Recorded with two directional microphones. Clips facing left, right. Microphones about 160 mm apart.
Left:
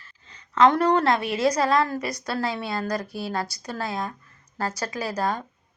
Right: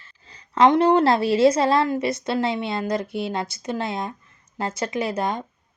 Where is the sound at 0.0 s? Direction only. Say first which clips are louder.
Right 1 dB; 30° right (ahead or behind).